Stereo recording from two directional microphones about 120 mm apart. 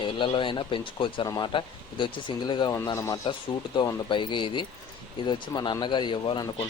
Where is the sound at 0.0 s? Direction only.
45° left (ahead or behind).